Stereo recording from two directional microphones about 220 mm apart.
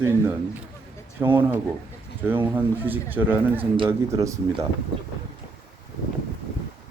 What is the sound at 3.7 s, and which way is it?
Speech, 20° right (ahead or behind).